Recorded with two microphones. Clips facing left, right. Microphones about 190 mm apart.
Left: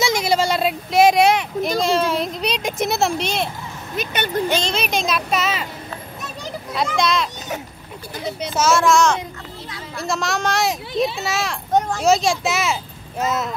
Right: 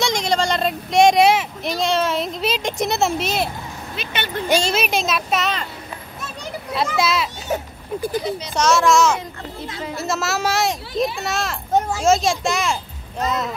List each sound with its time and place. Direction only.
0.0 s a sound: 5° left (ahead or behind)
3.9 s speech: 45° left (ahead or behind)
4.5 s a child's voice: 10° right (ahead or behind)
6.7 s a child's voice: 5° right (ahead or behind)
8.5 s a child's voice: centre (ahead or behind)